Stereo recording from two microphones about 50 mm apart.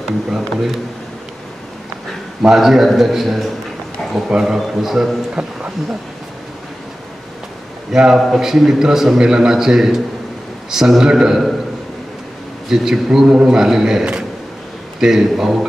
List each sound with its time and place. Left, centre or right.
0.0 s a man's voice: centre
2.4 s a man's voice: centre
4.6 s a man's voice: centre
5.3 s a man's voice: centre
7.9 s a man's voice: centre
12.6 s a man's voice: centre